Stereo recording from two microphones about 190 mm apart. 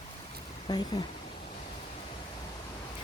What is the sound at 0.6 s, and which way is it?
Speech, 20° left (ahead or behind).